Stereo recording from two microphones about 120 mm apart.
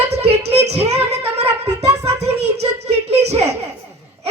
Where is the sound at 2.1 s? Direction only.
60° right (ahead or behind).